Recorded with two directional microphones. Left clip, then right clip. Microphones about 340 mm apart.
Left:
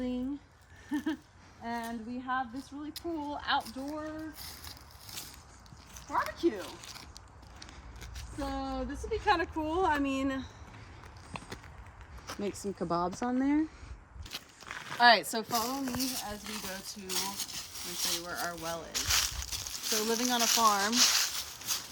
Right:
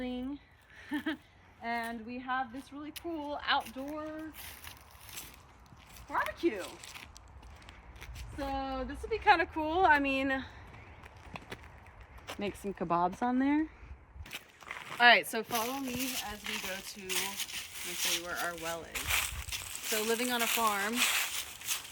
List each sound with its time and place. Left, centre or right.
0.9 s a sound: centre
1.6 s a woman's voice: centre
6.1 s speech: centre
8.1 s a woman's voice: centre
12.4 s speech: right
14.3 s speech: centre
18.9 s a sound: centre